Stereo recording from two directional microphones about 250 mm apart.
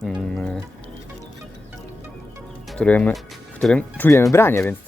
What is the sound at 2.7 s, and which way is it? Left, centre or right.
Speech, centre.